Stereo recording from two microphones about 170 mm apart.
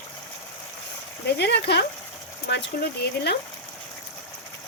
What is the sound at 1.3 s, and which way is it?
Speech, 80° left.